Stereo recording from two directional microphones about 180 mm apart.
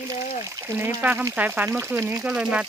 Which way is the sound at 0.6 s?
10° right (ahead or behind).